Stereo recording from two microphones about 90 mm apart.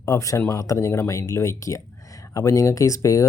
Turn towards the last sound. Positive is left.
turn(degrees=35)  # may be behind; listen again after turning